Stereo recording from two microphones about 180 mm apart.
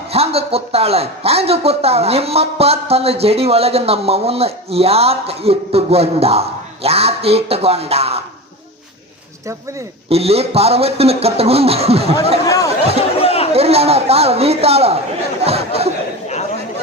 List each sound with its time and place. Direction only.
0.1 s speech: 35° right (ahead or behind)
10.1 s speech: 35° right (ahead or behind)
12.5 s speech: 20° left (ahead or behind)
13.0 s chatter: 35° left (ahead or behind)
13.5 s speech: 35° right (ahead or behind)